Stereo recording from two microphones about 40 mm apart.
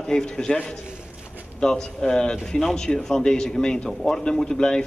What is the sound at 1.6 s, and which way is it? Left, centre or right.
A man's voice, centre.